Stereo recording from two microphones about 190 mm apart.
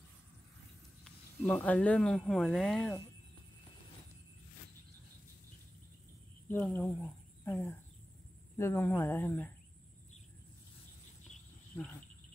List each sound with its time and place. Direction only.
1.0 s speech: 10° left (ahead or behind)
6.5 s speech: 5° left (ahead or behind)
11.7 s cricket: 10° left (ahead or behind)